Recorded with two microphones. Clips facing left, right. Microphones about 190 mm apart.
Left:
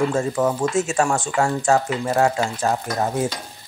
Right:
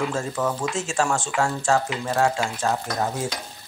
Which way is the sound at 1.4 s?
15° left (ahead or behind).